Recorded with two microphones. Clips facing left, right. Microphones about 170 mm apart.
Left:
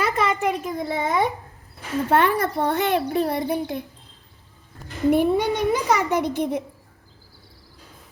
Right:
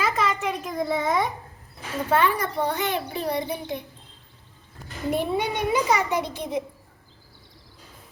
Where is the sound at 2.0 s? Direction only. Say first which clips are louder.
Left 3 dB; 60° left (ahead or behind).